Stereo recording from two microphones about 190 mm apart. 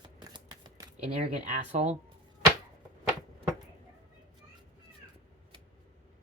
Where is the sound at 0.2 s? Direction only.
20° right (ahead or behind).